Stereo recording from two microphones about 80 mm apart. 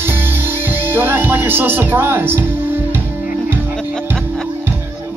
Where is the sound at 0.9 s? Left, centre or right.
Right.